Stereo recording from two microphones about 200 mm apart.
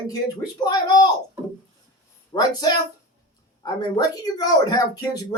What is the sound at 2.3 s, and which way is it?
Speech, 20° left (ahead or behind).